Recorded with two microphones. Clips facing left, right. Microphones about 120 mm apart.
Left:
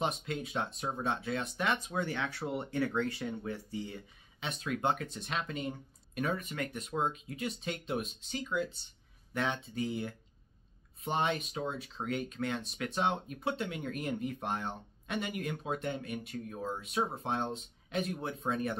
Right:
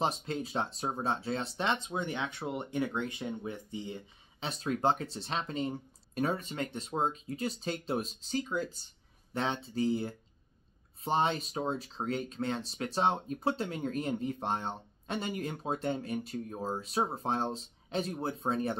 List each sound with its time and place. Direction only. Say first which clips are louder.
0.0 s speech: right 2 dB; 30° right (ahead or behind)
4.5 s speech: right 3 dB; 35° right (ahead or behind)